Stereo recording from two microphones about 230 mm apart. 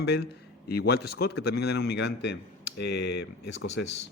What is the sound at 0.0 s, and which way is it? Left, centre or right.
A man's voice, left.